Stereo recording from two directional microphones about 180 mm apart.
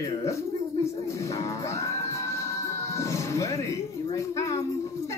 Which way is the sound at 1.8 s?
15° left (ahead or behind).